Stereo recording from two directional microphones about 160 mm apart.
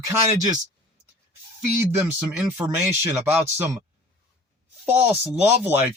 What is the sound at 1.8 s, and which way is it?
Speech, 10° right (ahead or behind).